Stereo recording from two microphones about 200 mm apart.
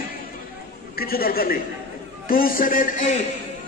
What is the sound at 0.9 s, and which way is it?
A man's voice, 45° left (ahead or behind).